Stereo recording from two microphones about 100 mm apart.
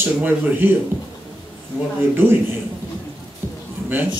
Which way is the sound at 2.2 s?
20° right (ahead or behind).